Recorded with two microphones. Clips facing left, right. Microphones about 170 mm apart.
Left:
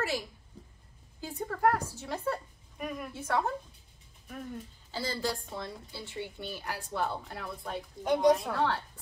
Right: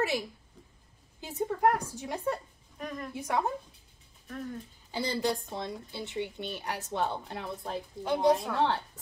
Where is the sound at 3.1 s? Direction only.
15° right (ahead or behind).